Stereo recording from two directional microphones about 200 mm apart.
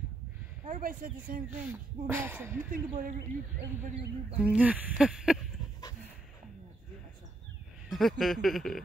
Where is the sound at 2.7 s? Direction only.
45° right (ahead or behind).